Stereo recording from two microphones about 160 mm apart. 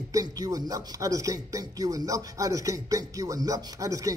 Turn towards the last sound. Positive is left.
turn(degrees=-20)  # may be behind; listen again after turning